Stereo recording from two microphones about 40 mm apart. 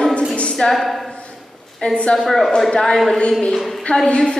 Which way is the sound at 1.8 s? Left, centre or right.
Left.